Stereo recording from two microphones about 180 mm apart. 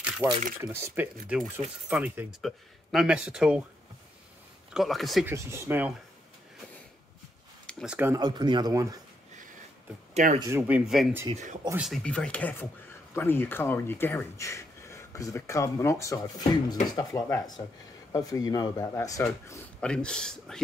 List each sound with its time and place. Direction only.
0.2 s speech: 10° right (ahead or behind)
4.7 s speech: centre (ahead or behind)
5.2 s speech: 15° right (ahead or behind)
7.6 s speech: 5° right (ahead or behind)
8.2 s speech: 25° right (ahead or behind)
10.1 s speech: 40° right (ahead or behind)
10.5 s speech: 5° right (ahead or behind)
11.3 s speech: 40° right (ahead or behind)
11.7 s speech: centre (ahead or behind)